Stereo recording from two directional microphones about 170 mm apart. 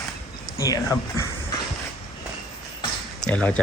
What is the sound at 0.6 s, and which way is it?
Speech, 20° left (ahead or behind).